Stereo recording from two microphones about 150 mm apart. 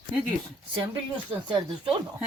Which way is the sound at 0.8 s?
35° right (ahead or behind).